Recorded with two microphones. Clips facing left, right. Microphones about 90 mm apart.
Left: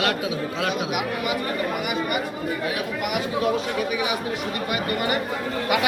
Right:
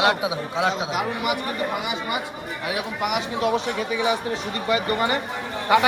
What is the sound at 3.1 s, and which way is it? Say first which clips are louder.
Speech: even; 25° right (ahead or behind).